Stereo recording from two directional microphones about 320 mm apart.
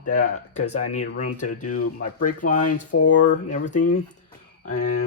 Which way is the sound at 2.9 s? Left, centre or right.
Left.